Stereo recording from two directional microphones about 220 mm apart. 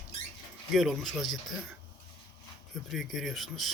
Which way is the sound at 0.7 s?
Centre (ahead or behind).